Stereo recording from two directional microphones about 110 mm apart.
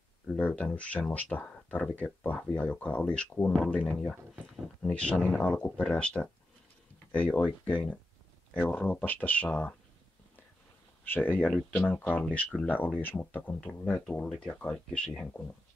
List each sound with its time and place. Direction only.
0.4 s speech: 10° left (ahead or behind)
11.1 s speech: 15° left (ahead or behind)